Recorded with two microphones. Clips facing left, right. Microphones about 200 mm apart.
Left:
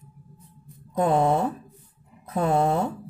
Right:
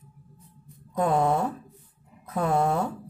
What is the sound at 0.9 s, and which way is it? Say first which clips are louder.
Speech: left 2 dB; 25° left (ahead or behind).